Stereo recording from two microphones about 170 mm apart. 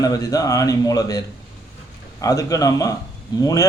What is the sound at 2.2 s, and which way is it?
Speech, 20° left (ahead or behind).